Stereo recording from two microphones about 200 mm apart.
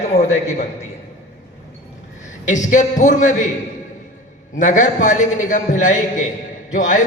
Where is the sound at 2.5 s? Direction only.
40° left (ahead or behind).